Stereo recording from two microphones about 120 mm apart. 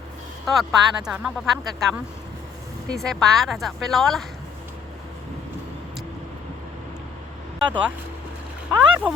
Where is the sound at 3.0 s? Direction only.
Centre (ahead or behind).